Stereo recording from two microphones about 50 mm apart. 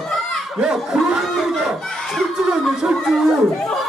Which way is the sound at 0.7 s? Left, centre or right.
Centre.